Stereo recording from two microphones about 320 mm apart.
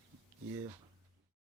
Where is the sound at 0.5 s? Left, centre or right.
Centre.